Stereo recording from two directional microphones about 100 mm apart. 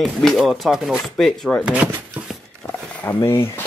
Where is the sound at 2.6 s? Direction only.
20° left (ahead or behind).